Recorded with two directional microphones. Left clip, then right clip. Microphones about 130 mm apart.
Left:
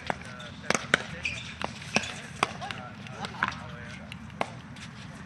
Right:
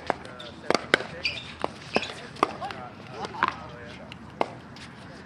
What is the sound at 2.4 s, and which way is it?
Chop, 5° left (ahead or behind).